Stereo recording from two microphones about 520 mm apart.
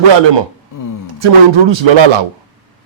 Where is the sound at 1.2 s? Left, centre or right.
Right.